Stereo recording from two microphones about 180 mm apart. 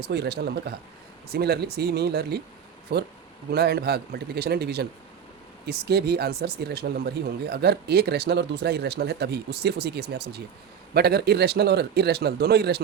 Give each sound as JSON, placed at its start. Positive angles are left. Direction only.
{"t": 0.0, "sound": "speech", "side_deg": -65}